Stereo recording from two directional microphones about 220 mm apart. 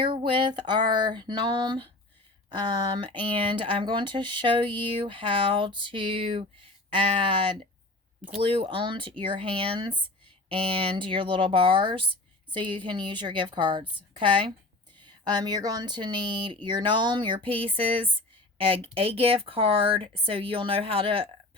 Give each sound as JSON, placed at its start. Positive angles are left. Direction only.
{"t": 0.0, "sound": "speech", "side_deg": -20}